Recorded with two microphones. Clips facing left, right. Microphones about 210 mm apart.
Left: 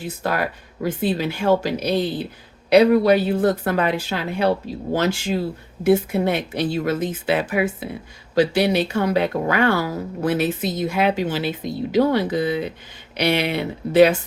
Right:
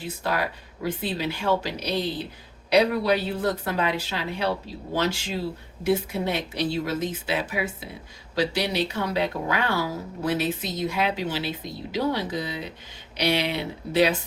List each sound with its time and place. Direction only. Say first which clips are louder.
0.0 s speech: left 4 dB; 50° left (ahead or behind)